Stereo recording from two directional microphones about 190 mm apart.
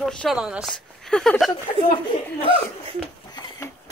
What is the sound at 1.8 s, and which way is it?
Speech, 30° right (ahead or behind).